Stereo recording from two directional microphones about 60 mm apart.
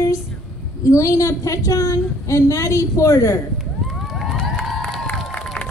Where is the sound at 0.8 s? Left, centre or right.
Left.